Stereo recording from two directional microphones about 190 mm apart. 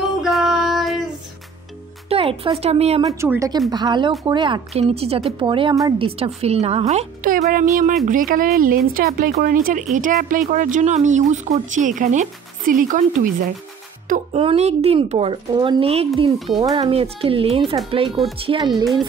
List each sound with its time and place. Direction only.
0.0 s female singing: centre (ahead or behind)
2.0 s speech: 30° right (ahead or behind)
3.0 s speech: 15° right (ahead or behind); by 13.5 s 45° right (ahead or behind)
14.0 s music: 45° right (ahead or behind)
14.4 s speech: 30° right (ahead or behind)